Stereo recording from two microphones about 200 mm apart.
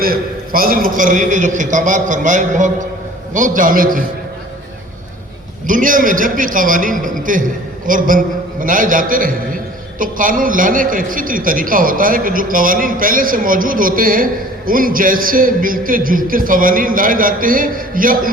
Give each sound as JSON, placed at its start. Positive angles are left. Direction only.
{"t": 0.0, "sound": "a man's voice", "side_deg": -45}
{"t": 5.6, "sound": "a man's voice", "side_deg": -40}